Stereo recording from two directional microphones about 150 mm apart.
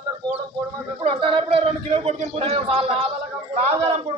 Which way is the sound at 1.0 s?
35° right (ahead or behind).